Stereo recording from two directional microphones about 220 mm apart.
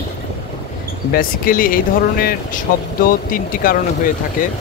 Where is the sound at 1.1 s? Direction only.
40° left (ahead or behind).